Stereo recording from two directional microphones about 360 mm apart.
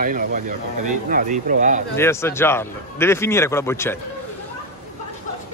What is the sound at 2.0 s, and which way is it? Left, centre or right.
A man's voice, centre.